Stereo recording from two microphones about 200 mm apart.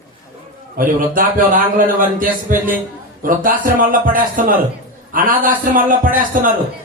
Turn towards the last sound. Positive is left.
turn(degrees=-45)  # may be behind; listen again after turning